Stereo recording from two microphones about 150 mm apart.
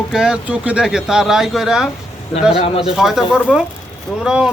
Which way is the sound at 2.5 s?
45° left (ahead or behind).